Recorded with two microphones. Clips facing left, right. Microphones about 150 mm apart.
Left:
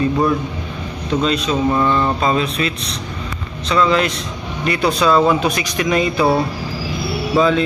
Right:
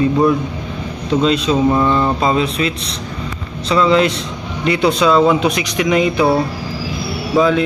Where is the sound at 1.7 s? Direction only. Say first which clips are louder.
Right 2 dB; 15° right (ahead or behind).